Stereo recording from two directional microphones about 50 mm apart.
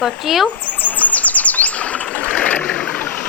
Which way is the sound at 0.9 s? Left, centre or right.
Left.